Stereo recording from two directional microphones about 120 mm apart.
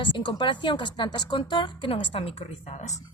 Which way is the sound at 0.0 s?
40° left (ahead or behind).